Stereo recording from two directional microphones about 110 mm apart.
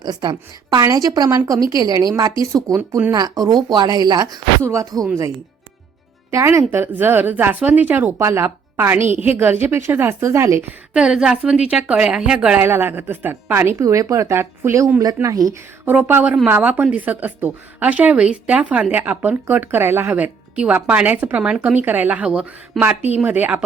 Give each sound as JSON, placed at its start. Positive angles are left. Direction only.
{"t": 0.0, "sound": "a woman's voice", "side_deg": -40}
{"t": 4.6, "sound": "speech", "side_deg": -25}
{"t": 6.3, "sound": "speech", "side_deg": -25}
{"t": 10.9, "sound": "a woman's voice", "side_deg": -5}
{"t": 12.6, "sound": "a woman's voice", "side_deg": -20}
{"t": 15.9, "sound": "a woman's voice", "side_deg": -15}
{"t": 22.8, "sound": "speech", "side_deg": 0}
{"t": 23.1, "sound": "a woman's voice", "side_deg": -15}